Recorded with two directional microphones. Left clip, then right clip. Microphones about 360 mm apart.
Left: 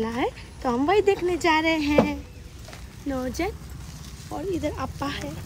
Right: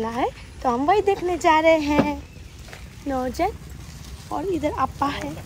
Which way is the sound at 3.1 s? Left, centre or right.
Centre.